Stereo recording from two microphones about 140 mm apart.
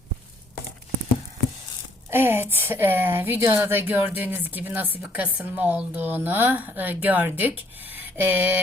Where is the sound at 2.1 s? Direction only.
15° right (ahead or behind).